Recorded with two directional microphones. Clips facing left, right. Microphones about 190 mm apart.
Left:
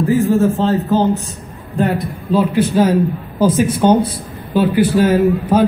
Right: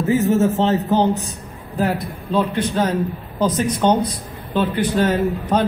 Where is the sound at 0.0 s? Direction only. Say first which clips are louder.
Left 3 dB; 20° right (ahead or behind).